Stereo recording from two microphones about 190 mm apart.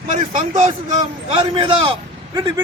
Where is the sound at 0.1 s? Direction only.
40° right (ahead or behind).